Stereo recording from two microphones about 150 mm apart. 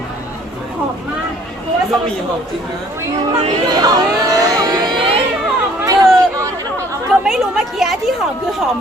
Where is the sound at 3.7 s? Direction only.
25° right (ahead or behind).